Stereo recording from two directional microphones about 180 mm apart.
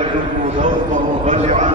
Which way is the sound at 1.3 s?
40° right (ahead or behind).